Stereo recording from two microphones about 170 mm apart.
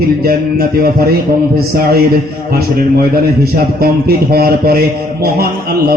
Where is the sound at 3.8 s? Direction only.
65° right (ahead or behind).